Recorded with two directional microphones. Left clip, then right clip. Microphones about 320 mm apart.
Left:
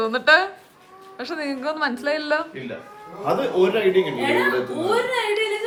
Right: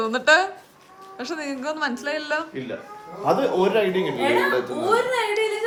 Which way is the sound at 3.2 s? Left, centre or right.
Right.